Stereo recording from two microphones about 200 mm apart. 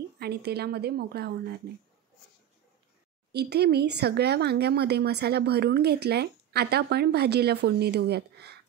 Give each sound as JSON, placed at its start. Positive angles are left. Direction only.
{"t": 0.2, "sound": "a woman's voice", "side_deg": -55}
{"t": 3.3, "sound": "speech", "side_deg": -55}